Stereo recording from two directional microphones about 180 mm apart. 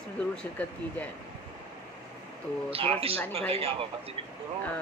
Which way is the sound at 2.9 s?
30° right (ahead or behind).